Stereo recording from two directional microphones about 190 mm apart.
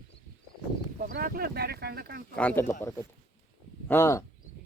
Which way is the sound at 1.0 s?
45° right (ahead or behind).